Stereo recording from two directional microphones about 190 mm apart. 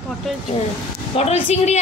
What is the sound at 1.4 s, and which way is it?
Speech, 35° left (ahead or behind).